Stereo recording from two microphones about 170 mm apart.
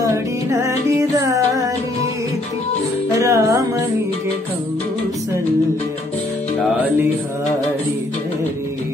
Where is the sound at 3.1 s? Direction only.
15° right (ahead or behind).